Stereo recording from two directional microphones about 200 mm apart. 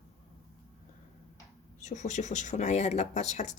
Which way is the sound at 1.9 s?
35° left (ahead or behind).